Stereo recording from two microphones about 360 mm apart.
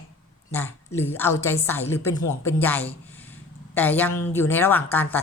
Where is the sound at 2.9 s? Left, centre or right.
Centre.